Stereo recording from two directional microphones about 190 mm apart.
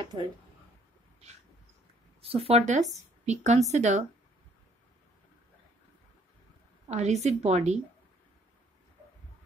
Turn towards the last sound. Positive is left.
turn(degrees=-35)  # may be behind; listen again after turning